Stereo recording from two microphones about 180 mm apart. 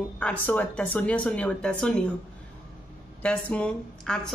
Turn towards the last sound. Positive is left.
turn(degrees=5)  # may be behind; listen again after turning